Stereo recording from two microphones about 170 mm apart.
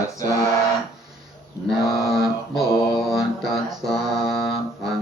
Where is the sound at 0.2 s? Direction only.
20° left (ahead or behind).